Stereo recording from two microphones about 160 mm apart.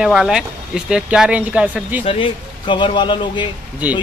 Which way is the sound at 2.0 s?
30° left (ahead or behind).